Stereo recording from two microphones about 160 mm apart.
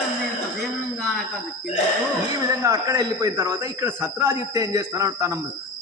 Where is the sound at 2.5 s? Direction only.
20° right (ahead or behind).